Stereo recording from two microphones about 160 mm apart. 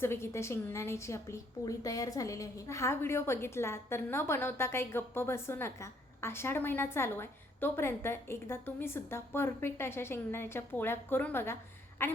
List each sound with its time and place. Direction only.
0.0 s a woman's voice: 15° left (ahead or behind)